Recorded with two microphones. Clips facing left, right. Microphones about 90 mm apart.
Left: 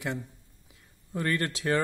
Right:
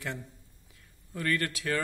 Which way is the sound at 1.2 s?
25° left (ahead or behind).